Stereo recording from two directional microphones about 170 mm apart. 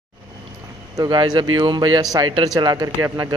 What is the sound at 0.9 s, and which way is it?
Speech, 25° right (ahead or behind).